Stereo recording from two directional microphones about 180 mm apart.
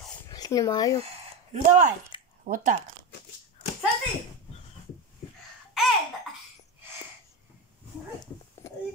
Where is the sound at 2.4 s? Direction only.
50° right (ahead or behind).